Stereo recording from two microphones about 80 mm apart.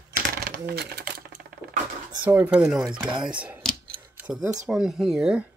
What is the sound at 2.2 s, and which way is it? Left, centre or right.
Speech, right.